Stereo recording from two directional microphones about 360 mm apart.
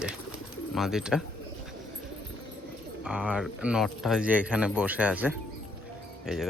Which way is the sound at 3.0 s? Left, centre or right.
Centre.